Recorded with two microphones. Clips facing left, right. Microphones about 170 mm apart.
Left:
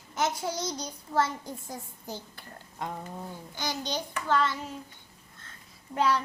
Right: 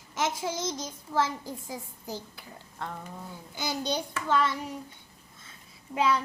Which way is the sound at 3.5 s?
10° right (ahead or behind).